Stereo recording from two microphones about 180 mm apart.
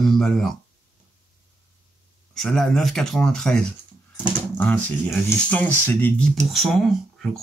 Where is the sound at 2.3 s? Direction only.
Centre (ahead or behind).